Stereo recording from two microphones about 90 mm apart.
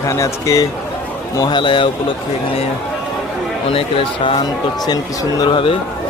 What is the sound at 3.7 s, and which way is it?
Speech, 90° left.